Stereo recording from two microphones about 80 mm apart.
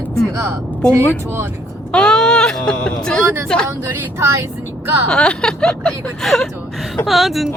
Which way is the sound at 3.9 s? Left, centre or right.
Right.